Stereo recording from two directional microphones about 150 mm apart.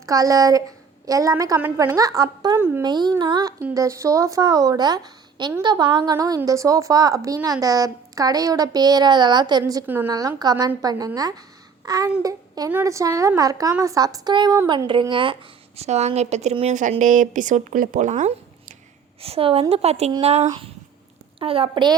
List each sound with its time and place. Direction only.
0.0 s a woman's voice: 25° right (ahead or behind)
9.8 s a woman's voice: 10° right (ahead or behind)
10.1 s a woman's voice: 25° right (ahead or behind); by 18.3 s 55° right (ahead or behind)
19.2 s a child's voice: 40° right (ahead or behind)